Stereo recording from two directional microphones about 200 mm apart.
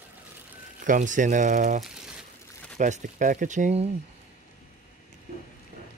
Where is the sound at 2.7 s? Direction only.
35° right (ahead or behind).